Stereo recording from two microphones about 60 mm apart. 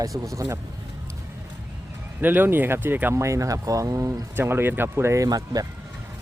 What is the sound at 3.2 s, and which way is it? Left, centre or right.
Speech, right.